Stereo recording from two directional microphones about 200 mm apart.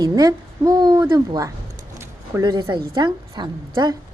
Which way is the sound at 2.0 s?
15° right (ahead or behind).